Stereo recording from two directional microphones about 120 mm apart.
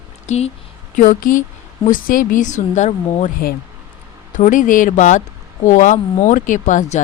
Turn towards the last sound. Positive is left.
turn(degrees=90)